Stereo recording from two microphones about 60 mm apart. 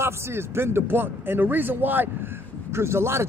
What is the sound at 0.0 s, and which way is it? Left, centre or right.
A man's voice, right.